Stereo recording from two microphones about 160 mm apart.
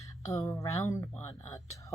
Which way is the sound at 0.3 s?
20° left (ahead or behind).